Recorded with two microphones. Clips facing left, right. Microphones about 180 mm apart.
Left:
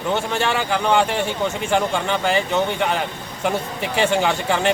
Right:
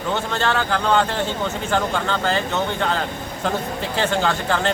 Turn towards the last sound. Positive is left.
turn(degrees=15)  # may be behind; listen again after turning